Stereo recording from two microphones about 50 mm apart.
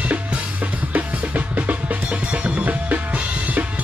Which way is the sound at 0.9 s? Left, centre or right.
Right.